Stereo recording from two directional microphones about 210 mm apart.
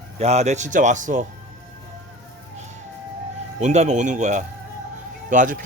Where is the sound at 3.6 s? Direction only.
35° right (ahead or behind).